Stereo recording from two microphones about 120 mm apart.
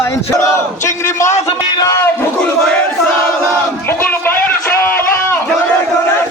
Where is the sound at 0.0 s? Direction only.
25° left (ahead or behind).